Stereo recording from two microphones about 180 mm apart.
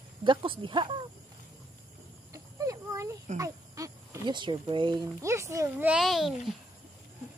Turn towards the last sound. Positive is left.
turn(degrees=0)  # may be behind; listen again after turning